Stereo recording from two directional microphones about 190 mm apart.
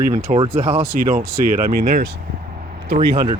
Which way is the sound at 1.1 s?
45° right (ahead or behind).